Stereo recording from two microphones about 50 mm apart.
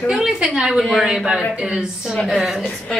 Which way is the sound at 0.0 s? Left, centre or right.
Centre.